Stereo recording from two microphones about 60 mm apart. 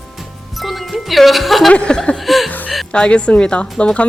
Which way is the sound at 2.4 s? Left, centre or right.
Left.